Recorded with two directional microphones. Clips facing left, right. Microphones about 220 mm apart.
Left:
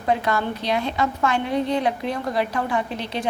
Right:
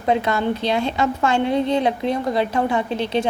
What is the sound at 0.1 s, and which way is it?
A woman's voice, 25° right (ahead or behind).